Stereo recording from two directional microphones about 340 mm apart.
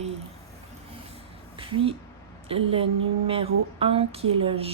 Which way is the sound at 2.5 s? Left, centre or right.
Centre.